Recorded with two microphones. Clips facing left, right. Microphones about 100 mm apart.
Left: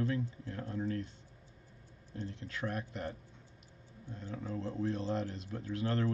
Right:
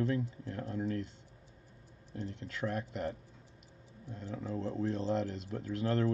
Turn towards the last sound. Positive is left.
turn(degrees=-40)  # may be behind; listen again after turning